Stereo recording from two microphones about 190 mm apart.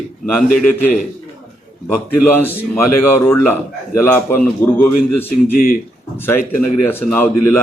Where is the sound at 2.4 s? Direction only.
10° left (ahead or behind).